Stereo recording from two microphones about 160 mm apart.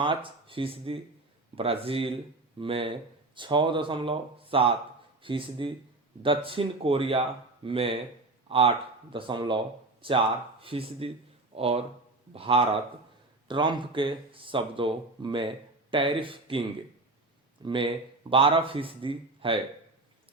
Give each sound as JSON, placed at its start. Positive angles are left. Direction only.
{"t": 0.0, "sound": "speech", "side_deg": -30}